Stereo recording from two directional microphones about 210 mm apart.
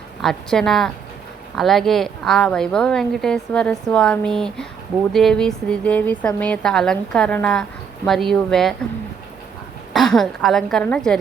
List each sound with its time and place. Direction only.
0.2 s a woman's voice: centre (ahead or behind)
9.9 s a woman's voice: centre (ahead or behind)